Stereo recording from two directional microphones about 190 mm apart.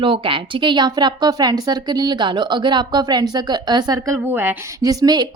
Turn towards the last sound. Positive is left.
turn(degrees=-20)  # may be behind; listen again after turning